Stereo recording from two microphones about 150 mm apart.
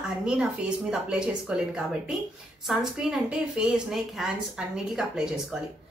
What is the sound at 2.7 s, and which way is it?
A woman's voice, 5° right (ahead or behind).